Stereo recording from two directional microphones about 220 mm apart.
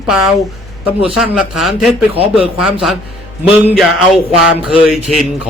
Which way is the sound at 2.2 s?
25° left (ahead or behind).